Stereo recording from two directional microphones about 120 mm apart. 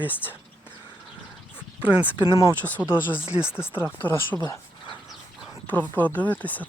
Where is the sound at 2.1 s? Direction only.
35° left (ahead or behind).